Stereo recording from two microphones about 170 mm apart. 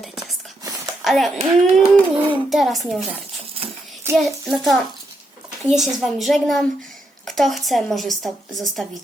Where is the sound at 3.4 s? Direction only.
35° right (ahead or behind).